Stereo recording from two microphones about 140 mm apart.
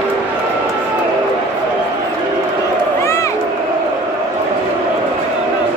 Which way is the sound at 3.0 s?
20° left (ahead or behind).